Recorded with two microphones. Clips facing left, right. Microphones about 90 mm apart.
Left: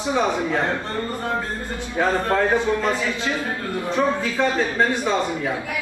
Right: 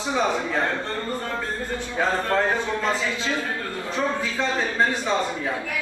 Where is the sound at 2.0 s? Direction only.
15° left (ahead or behind).